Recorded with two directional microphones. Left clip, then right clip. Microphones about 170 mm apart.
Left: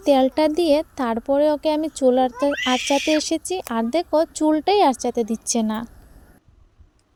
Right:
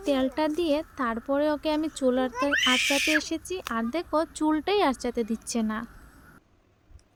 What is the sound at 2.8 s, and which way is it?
Speech, 10° right (ahead or behind).